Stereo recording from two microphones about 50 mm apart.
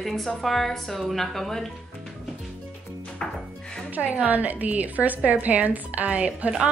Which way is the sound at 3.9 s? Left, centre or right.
Right.